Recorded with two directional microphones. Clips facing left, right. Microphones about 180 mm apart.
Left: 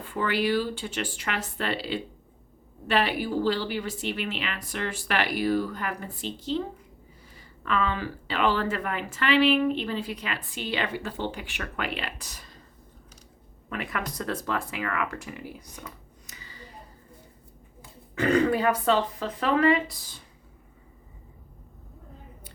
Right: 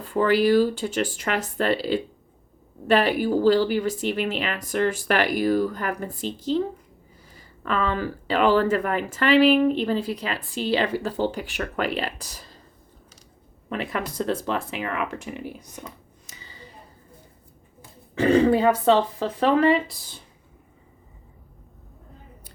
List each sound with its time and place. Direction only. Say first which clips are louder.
0.0 s speech: right 7 dB; 40° right (ahead or behind)
13.7 s speech: right 4 dB; 30° right (ahead or behind)
18.1 s speech: right 5 dB; 25° right (ahead or behind)